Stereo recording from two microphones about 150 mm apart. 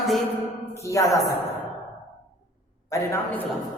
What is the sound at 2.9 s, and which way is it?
Speech, 20° left (ahead or behind).